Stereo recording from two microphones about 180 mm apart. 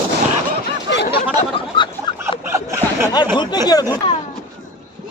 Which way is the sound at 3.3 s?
25° left (ahead or behind).